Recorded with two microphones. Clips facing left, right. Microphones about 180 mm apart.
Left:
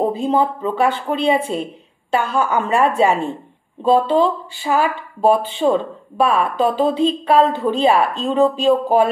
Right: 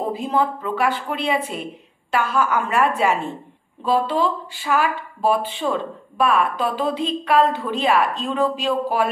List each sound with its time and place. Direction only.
0.0 s a woman's voice: 25° left (ahead or behind)